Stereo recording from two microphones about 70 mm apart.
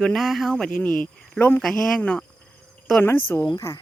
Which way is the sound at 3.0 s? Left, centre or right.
Left.